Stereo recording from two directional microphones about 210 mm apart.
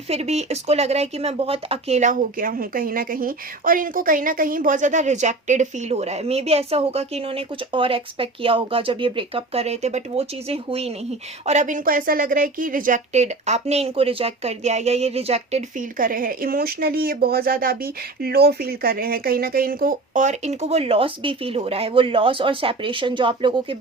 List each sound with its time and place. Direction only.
0.1 s a woman's voice: 30° right (ahead or behind)